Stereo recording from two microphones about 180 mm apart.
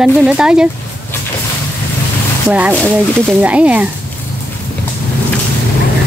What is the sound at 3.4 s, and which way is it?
Speech, 5° right (ahead or behind).